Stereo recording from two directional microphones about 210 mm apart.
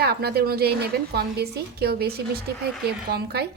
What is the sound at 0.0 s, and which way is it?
A woman's voice, 50° right (ahead or behind).